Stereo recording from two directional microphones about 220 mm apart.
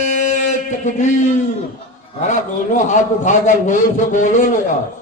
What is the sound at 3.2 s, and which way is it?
Speech, 35° left (ahead or behind).